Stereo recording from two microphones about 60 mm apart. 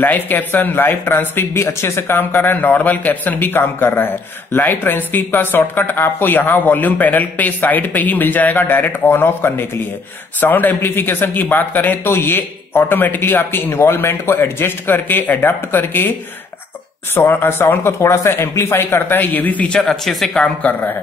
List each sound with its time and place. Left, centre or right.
0.0 s speech: left
17.1 s speech: left
19.8 s speech: centre
20.7 s speech: left